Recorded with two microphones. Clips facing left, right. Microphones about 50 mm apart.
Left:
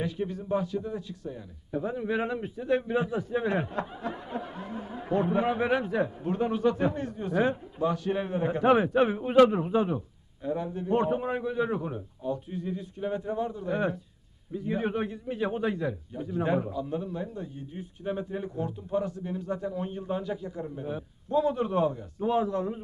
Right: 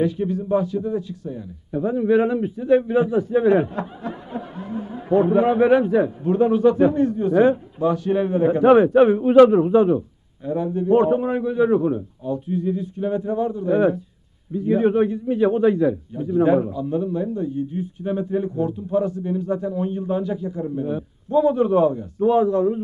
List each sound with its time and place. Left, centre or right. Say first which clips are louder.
0.0 s speech: right 10 dB; centre
1.8 s a man's voice: right 11 dB; right
2.4 s speech: right 10 dB; centre
2.7 s a man's voice: right 10 dB; right
3.6 s snicker: right 5 dB; centre
5.1 s a man's voice: right 10 dB; right
6.0 s a man's voice: right 10 dB; centre
16.6 s a man's voice: right 8 dB; centre